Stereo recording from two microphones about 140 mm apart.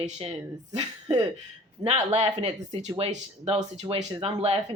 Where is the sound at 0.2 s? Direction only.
50° right (ahead or behind).